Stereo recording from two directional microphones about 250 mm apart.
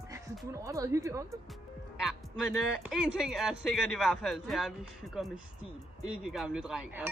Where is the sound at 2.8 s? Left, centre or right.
Centre.